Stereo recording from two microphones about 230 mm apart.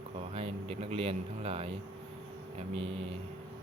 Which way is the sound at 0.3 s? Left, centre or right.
Right.